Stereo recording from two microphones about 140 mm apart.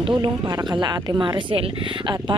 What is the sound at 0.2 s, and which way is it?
Speech, 30° right (ahead or behind).